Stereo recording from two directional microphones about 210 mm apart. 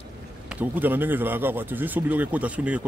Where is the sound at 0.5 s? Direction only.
10° right (ahead or behind).